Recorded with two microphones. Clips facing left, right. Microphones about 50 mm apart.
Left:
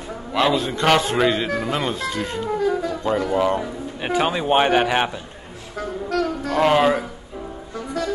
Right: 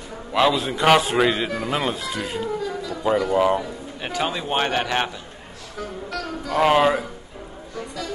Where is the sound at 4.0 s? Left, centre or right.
Centre.